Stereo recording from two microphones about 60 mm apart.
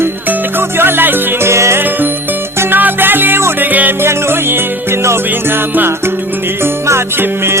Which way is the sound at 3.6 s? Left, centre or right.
Right.